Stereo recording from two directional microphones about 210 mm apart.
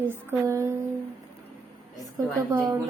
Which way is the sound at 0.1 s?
10° right (ahead or behind).